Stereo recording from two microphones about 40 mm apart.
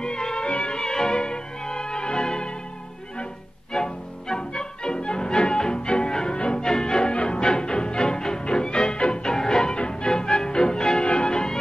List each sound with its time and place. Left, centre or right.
0.0 s music: centre
0.5 s music: left
0.7 s music: centre
3.7 s music: centre